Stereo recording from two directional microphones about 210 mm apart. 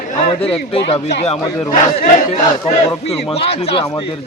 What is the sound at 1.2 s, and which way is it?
A man's voice, 35° left (ahead or behind).